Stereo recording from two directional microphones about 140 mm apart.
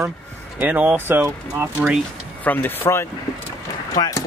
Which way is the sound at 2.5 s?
15° left (ahead or behind).